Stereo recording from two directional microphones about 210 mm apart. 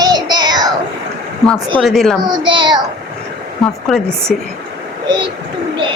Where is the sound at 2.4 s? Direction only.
20° right (ahead or behind).